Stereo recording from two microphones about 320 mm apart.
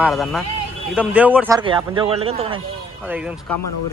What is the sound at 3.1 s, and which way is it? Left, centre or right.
Speech, centre.